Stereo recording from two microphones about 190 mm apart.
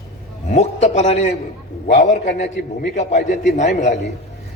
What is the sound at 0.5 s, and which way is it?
A man's voice, 35° left (ahead or behind).